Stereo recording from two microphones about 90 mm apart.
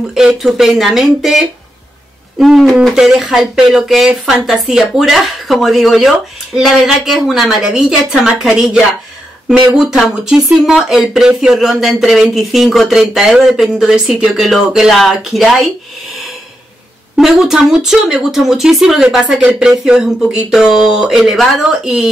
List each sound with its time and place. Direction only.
0.1 s speech: 5° right (ahead or behind)
17.2 s speech: 5° right (ahead or behind)